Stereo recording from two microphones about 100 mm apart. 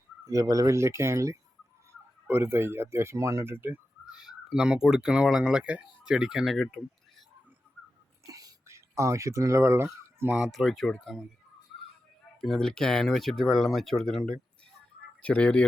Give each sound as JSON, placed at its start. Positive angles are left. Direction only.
{"t": 0.3, "sound": "speech", "side_deg": -35}
{"t": 4.0, "sound": "speech", "side_deg": -5}
{"t": 8.3, "sound": "a sound", "side_deg": -35}
{"t": 10.3, "sound": "speech", "side_deg": 0}
{"t": 12.4, "sound": "speech", "side_deg": 5}